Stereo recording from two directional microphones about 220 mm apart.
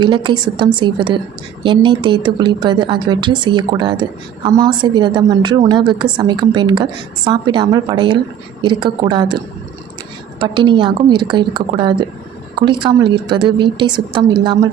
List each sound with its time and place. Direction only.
0.0 s a woman's voice: 20° right (ahead or behind)
10.4 s a woman's voice: 20° right (ahead or behind)